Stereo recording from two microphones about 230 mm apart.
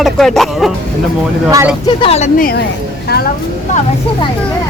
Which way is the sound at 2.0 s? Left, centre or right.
Left.